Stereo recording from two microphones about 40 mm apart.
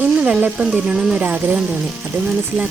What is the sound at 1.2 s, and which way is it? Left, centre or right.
Speech, right.